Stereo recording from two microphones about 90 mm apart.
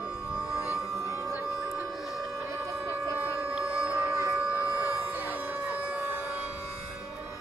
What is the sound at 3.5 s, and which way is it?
Music, 10° right (ahead or behind).